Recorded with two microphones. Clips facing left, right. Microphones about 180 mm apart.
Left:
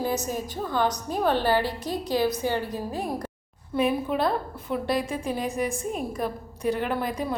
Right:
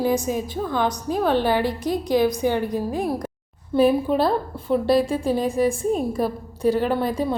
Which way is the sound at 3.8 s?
35° right (ahead or behind).